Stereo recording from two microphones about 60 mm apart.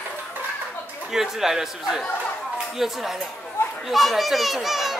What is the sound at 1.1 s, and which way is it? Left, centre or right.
A child's voice, centre.